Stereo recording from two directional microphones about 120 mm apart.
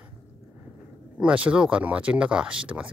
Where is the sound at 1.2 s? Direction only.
10° right (ahead or behind).